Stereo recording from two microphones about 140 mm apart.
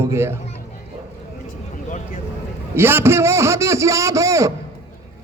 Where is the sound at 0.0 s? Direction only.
20° right (ahead or behind).